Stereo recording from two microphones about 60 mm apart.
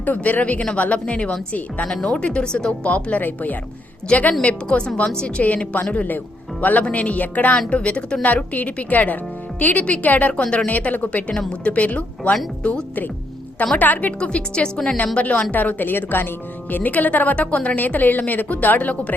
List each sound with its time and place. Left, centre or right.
0.0 s a woman's voice: left
5.4 s a woman's voice: left
13.7 s a woman's voice: left
14.2 s speech: centre
15.5 s a woman's voice: left